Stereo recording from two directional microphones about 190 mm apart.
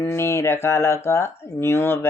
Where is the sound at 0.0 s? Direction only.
15° left (ahead or behind).